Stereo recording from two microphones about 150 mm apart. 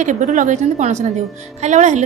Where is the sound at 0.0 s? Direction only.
55° right (ahead or behind).